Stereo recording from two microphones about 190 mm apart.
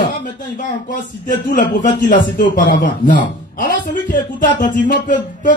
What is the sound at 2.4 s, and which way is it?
Speech, 45° left (ahead or behind).